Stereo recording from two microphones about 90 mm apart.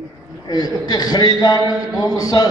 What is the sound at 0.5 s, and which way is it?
A man's voice, 45° left (ahead or behind).